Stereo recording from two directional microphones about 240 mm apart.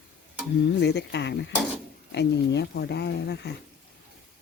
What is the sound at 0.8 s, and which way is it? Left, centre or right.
Speech, left.